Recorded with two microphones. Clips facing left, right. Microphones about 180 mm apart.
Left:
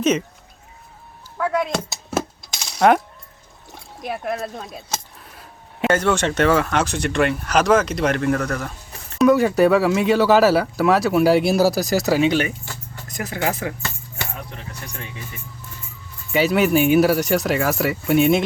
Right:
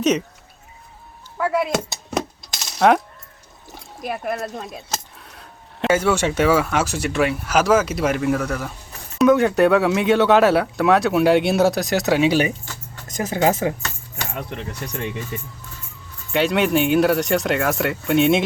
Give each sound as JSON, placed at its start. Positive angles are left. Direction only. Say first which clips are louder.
{"t": 0.0, "sound": "speech", "louder": "even", "side_deg": 0}
{"t": 1.4, "sound": "coin", "louder": "right 1 dB", "side_deg": -5}
{"t": 3.7, "sound": "a sound", "louder": "right 1 dB", "side_deg": 0}
{"t": 5.9, "sound": "speech", "louder": "right 1 dB", "side_deg": -10}
{"t": 13.1, "sound": "speech", "louder": "right 5 dB", "side_deg": -20}
{"t": 16.3, "sound": "speech", "louder": "left 1 dB", "side_deg": 5}